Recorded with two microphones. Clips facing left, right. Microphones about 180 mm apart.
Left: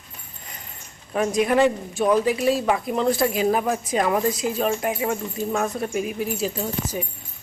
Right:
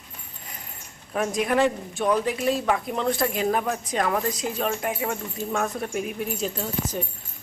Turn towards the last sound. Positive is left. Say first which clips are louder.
# left 2 dB
turn(degrees=10)  # may be behind; listen again after turning